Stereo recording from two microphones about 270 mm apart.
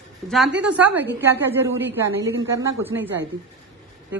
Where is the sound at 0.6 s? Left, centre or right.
Centre.